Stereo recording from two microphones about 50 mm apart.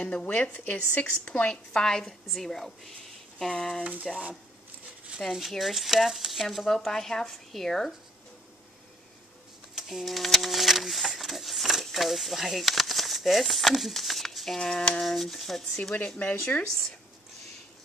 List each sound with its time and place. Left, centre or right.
0.0 s speech: left
0.7 s a woman's voice: left; by 3.8 s centre
4.1 s speech: right
5.2 s speech: centre
9.8 s speech: centre
16.2 s speech: left